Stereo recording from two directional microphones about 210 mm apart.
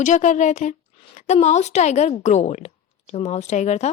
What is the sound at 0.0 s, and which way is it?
A woman's voice, 35° left (ahead or behind).